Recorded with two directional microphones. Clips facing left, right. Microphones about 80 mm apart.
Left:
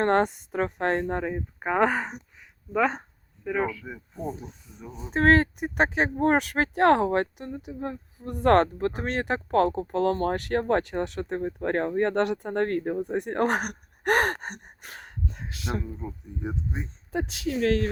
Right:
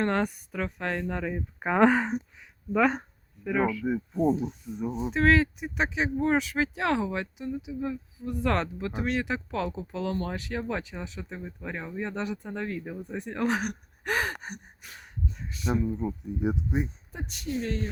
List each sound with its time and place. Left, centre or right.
0.2 s speech: left
1.5 s speech: centre
2.4 s a sound: centre
3.8 s speech: centre
4.4 s rub: centre
5.1 s speech: left
14.4 s gasp: left
14.8 s a sound: left
15.8 s speech: centre
17.1 s speech: left